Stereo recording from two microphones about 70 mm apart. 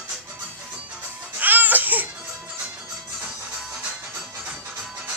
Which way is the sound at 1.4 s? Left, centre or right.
Right.